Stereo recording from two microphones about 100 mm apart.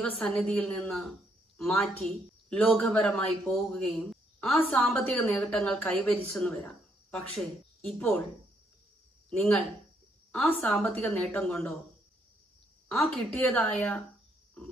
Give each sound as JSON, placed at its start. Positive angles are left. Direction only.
{"t": 0.2, "sound": "speech", "side_deg": 5}
{"t": 4.9, "sound": "speech", "side_deg": 15}
{"t": 9.3, "sound": "speech", "side_deg": 10}
{"t": 12.9, "sound": "speech", "side_deg": 5}